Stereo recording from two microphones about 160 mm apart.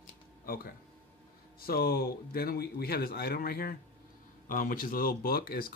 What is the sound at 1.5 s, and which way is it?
Speech, 70° left (ahead or behind).